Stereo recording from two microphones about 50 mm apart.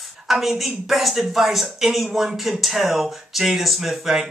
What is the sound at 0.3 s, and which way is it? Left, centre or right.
Speech, centre.